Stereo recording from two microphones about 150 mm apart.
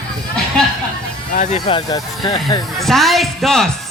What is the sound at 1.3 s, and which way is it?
Speech, 60° left (ahead or behind).